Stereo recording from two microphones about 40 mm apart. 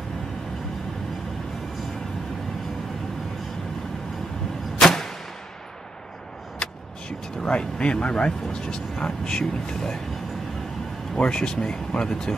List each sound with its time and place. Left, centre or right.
4.7 s arrow: centre
6.6 s vehicle: left
7.4 s speech: left
11.1 s speech: left